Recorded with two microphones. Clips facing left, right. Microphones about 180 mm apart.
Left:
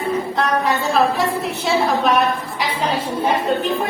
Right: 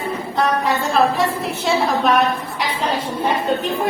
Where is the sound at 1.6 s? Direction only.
Centre (ahead or behind).